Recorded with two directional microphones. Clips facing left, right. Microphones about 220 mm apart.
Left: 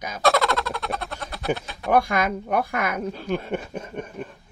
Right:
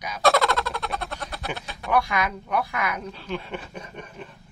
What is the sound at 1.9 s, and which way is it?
Speech, 45° left (ahead or behind).